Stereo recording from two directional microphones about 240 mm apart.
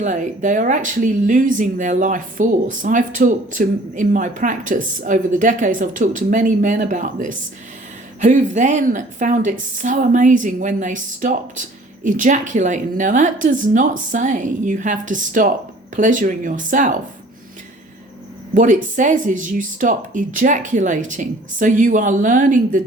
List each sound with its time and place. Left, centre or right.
0.0 s speech: right
18.5 s speech: right